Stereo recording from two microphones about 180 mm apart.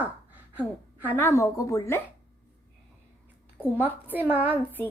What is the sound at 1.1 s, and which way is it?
Speech, 15° left (ahead or behind).